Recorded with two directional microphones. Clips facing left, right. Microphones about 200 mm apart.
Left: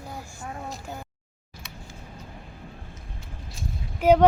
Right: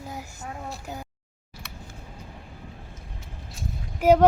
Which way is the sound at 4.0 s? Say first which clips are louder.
Even; 10° right (ahead or behind).